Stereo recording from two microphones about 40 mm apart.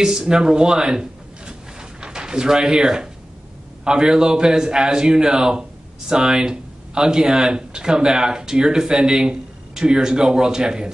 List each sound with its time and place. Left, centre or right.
0.0 s a man's voice: centre